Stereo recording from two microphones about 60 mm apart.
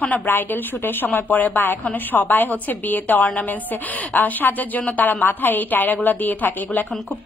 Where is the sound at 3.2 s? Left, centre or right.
Centre.